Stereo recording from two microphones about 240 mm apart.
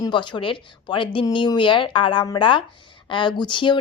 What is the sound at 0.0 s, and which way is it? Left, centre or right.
A woman's voice, centre.